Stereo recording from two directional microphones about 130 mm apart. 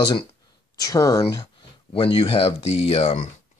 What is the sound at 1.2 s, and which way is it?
Speech, 40° left (ahead or behind).